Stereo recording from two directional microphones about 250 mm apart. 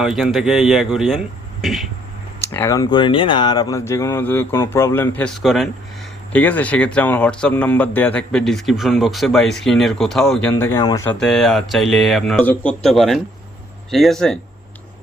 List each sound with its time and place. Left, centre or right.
0.0 s speech: centre
2.5 s speech: centre
11.2 s speech: centre